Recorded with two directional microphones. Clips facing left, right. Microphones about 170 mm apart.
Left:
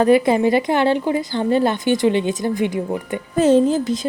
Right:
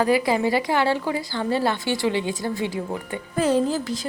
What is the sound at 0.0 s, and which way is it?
A woman's voice, 20° left (ahead or behind).